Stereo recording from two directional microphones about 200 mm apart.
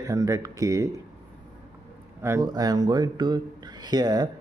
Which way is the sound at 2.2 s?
15° right (ahead or behind).